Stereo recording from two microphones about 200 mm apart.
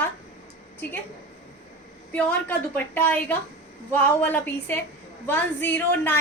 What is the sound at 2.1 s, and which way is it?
A woman's voice, 5° left (ahead or behind).